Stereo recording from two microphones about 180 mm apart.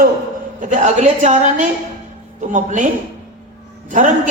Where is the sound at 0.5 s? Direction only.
45° right (ahead or behind).